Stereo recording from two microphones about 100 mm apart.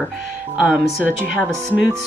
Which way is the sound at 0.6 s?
10° right (ahead or behind).